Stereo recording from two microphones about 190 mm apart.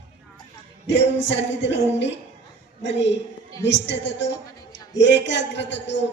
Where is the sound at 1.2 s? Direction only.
70° left (ahead or behind).